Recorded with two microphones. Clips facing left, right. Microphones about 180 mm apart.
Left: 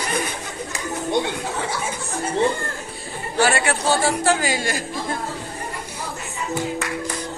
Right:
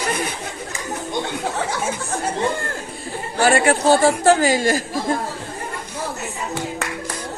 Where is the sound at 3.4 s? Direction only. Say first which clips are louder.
Right 6 dB; 45° right (ahead or behind).